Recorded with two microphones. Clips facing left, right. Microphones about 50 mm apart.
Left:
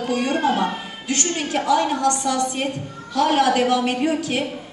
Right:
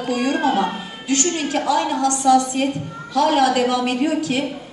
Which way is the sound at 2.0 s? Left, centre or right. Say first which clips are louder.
Right 5 dB; left.